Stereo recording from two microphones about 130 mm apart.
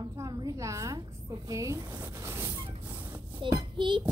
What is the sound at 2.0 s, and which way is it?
Vehicle, 20° right (ahead or behind).